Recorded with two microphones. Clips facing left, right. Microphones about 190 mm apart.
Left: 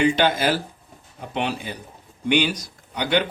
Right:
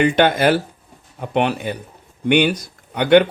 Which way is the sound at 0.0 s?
60° right (ahead or behind).